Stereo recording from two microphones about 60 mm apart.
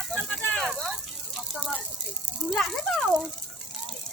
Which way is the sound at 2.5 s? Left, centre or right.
Centre.